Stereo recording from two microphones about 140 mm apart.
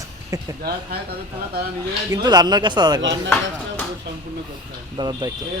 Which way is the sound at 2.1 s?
30° right (ahead or behind).